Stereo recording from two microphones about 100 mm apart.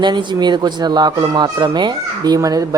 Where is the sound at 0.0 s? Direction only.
50° right (ahead or behind).